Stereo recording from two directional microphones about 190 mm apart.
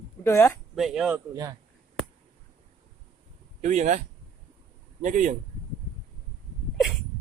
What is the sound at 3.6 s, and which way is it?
Speech, 40° right (ahead or behind).